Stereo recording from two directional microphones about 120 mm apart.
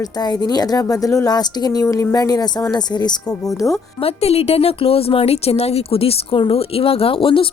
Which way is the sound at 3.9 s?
55° left (ahead or behind).